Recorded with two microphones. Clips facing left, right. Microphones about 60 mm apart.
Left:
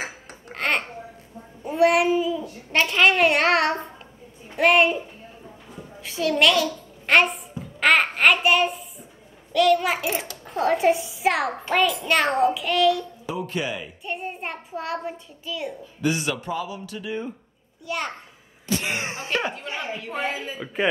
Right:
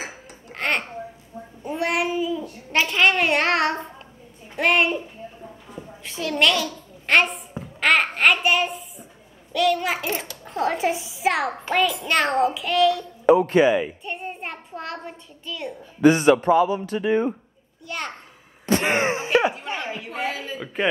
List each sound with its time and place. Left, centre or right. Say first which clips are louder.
0.5 s babbling: even; centre
1.6 s a child's voice: left 5 dB; centre
6.0 s a child's voice: left 2 dB; centre
13.2 s speech: right 14 dB; right
13.6 s speech: right 11 dB; right
14.0 s a child's voice: left 1 dB; centre
16.0 s speech: right 10 dB; right
17.8 s a child's voice: left 2 dB; centre
18.7 s a sound: right 7 dB; right
19.1 s speech: right 6 dB; centre
19.4 s a child's voice: right 4 dB; centre